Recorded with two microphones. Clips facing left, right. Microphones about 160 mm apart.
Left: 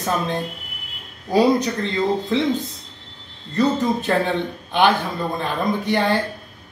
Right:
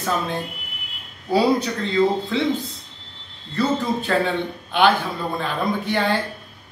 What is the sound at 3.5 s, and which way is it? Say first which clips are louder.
Speech: left 2 dB; 20° left (ahead or behind).